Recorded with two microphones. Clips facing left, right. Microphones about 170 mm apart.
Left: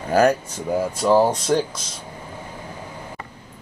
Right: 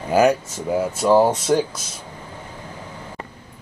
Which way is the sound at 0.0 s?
10° right (ahead or behind).